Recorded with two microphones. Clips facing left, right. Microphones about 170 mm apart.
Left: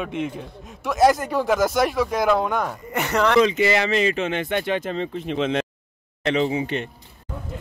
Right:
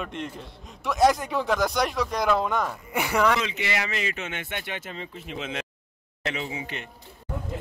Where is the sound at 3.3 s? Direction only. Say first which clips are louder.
Left 11 dB; 40° left (ahead or behind).